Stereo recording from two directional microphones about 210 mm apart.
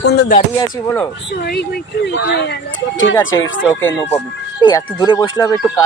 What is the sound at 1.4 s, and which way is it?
Speech, 50° left (ahead or behind).